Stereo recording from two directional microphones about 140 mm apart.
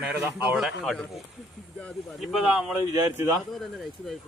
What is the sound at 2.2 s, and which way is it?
Speech, centre (ahead or behind).